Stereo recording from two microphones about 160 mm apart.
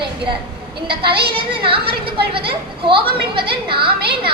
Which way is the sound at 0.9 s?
35° right (ahead or behind).